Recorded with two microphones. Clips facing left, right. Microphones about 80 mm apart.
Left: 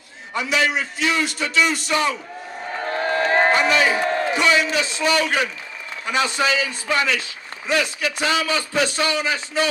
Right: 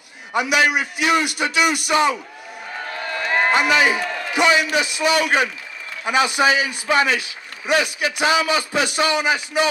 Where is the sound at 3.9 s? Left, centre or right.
Left.